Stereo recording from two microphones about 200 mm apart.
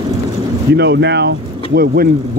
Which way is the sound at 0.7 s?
60° right (ahead or behind).